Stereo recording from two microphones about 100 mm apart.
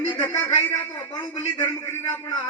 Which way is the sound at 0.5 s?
85° left.